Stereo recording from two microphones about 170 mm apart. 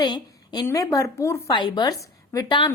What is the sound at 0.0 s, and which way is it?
A woman's voice, 25° left (ahead or behind).